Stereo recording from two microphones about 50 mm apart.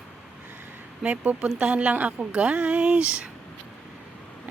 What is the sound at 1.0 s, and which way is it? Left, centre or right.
Speech, right.